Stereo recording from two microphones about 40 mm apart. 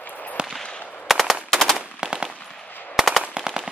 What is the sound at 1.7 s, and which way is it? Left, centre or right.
Machine gun, centre.